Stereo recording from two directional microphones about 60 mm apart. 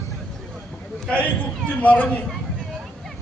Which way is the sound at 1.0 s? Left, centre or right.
Left.